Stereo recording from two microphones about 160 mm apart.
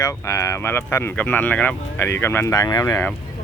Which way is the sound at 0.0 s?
20° left (ahead or behind).